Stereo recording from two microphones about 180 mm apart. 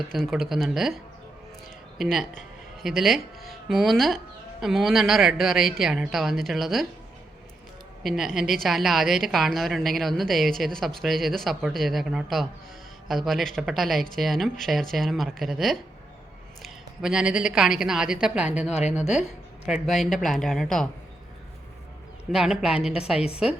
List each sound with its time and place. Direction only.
0.1 s a woman's voice: centre (ahead or behind)
2.0 s a woman's voice: centre (ahead or behind)
8.0 s a woman's voice: centre (ahead or behind)
18.7 s a woman's voice: 35° left (ahead or behind)
18.9 s a woman's voice: 5° right (ahead or behind)
22.3 s a woman's voice: 5° right (ahead or behind)